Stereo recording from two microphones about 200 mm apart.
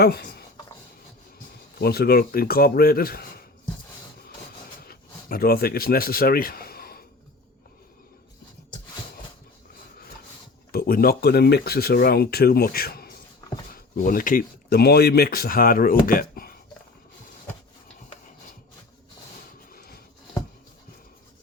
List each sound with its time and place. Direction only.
0.0 s speech: 55° left (ahead or behind)
1.8 s speech: 50° left (ahead or behind)
4.9 s speech: 50° left (ahead or behind)
10.7 s speech: 50° left (ahead or behind)
19.7 s a sound: 50° left (ahead or behind)